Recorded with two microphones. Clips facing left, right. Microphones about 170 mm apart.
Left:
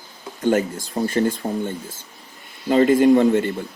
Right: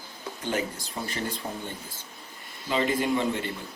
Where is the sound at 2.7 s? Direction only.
45° left (ahead or behind).